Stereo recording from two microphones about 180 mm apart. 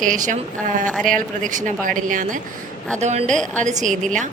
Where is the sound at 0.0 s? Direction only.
45° right (ahead or behind).